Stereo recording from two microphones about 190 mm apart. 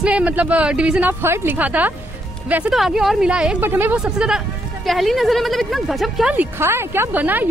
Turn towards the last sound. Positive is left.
turn(degrees=-10)  # may be behind; listen again after turning